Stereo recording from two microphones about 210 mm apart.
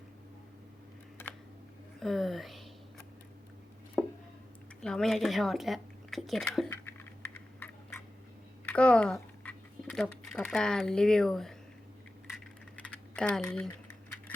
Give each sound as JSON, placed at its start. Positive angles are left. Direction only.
{"t": 2.0, "sound": "speech", "side_deg": 0}
{"t": 4.0, "sound": "chopping", "side_deg": -5}
{"t": 4.8, "sound": "speech", "side_deg": 5}
{"t": 6.7, "sound": "typing", "side_deg": 10}
{"t": 8.6, "sound": "speech", "side_deg": 5}
{"t": 13.1, "sound": "speech", "side_deg": 5}